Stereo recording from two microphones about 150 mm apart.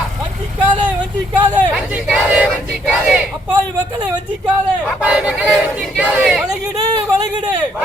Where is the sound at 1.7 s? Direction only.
5° right (ahead or behind).